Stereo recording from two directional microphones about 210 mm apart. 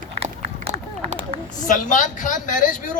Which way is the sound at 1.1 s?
30° right (ahead or behind).